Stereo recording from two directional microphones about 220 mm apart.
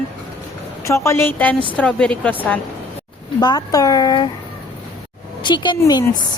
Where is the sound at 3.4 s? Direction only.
20° left (ahead or behind).